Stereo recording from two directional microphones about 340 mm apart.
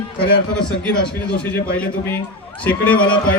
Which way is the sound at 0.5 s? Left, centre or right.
Centre.